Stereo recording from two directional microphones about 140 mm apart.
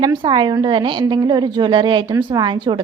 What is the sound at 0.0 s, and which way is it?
A woman's voice, 30° right (ahead or behind).